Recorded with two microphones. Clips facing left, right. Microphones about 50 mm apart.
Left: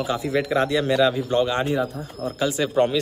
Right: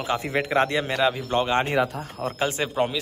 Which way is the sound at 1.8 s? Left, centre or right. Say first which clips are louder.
Even; right.